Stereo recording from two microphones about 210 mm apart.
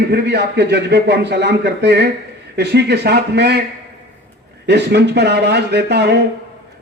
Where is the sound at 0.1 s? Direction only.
50° right (ahead or behind).